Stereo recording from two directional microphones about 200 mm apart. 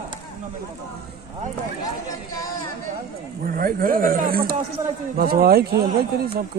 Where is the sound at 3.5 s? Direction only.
45° right (ahead or behind).